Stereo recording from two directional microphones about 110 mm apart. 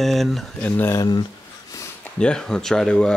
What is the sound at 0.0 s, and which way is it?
Speech, centre (ahead or behind).